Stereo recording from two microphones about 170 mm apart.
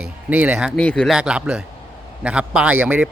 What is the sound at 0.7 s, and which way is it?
A man's voice, 5° left (ahead or behind).